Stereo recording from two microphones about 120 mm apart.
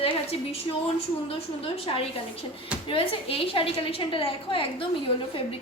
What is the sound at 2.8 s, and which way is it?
A woman's voice, 50° left (ahead or behind).